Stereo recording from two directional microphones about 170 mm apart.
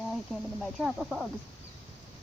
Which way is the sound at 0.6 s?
Centre (ahead or behind).